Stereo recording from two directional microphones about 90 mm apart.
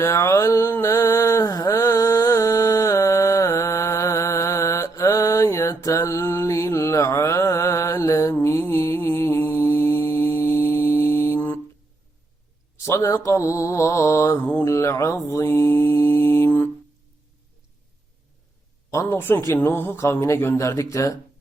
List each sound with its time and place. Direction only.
0.0 s mantra: 30° left (ahead or behind)
11.3 s a sound: 20° left (ahead or behind)
12.8 s mantra: 35° left (ahead or behind)
19.0 s speech: 25° left (ahead or behind)
20.2 s mantra: 30° left (ahead or behind)